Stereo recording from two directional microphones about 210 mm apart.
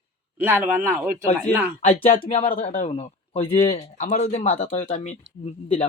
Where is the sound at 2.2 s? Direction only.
25° left (ahead or behind).